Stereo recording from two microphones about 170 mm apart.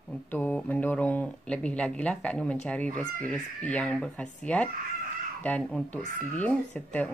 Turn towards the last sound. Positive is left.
turn(degrees=10)  # may be behind; listen again after turning